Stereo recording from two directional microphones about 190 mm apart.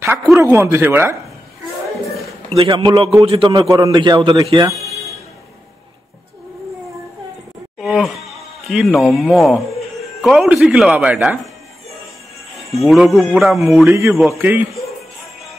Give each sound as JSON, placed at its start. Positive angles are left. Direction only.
{"t": 0.0, "sound": "speech", "side_deg": -10}
{"t": 2.0, "sound": "a sound", "side_deg": 0}
{"t": 2.5, "sound": "a man's voice", "side_deg": -25}
{"t": 7.8, "sound": "a sound", "side_deg": 0}
{"t": 8.3, "sound": "music", "side_deg": 0}
{"t": 9.1, "sound": "a man's voice", "side_deg": 0}
{"t": 12.7, "sound": "a man's voice", "side_deg": 0}
{"t": 13.8, "sound": "speech", "side_deg": -15}